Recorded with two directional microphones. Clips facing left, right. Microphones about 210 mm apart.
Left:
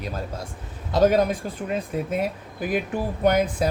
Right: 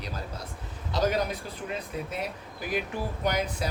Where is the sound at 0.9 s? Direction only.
50° left (ahead or behind).